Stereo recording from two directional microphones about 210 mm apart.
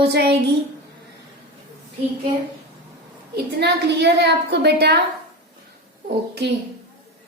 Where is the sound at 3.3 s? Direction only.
55° right (ahead or behind).